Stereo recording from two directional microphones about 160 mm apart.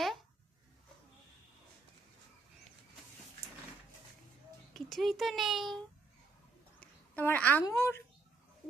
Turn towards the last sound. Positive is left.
turn(degrees=15)  # may be behind; listen again after turning